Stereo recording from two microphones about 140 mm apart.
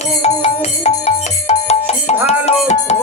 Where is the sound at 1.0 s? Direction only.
50° left (ahead or behind).